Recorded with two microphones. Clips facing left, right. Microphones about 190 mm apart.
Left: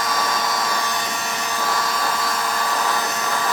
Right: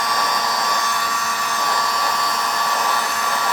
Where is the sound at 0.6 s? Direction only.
10° left (ahead or behind).